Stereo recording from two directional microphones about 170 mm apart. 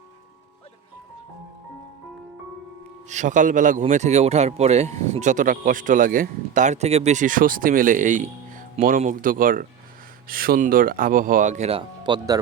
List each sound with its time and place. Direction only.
3.1 s speech: 45° right (ahead or behind)
11.8 s speech: 25° right (ahead or behind)